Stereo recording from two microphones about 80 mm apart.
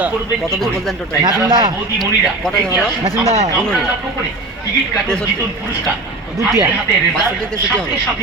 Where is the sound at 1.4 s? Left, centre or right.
Right.